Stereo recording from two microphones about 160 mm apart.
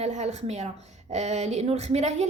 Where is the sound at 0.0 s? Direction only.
45° right (ahead or behind).